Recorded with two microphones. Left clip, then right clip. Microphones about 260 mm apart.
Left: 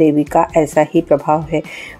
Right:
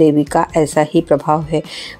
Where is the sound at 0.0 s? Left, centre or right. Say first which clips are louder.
Even; right.